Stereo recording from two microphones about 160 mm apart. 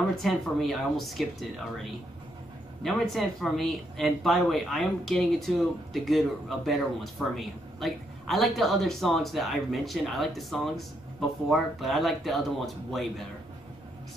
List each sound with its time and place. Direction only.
0.2 s a man's voice: centre (ahead or behind)
2.8 s a man's voice: centre (ahead or behind)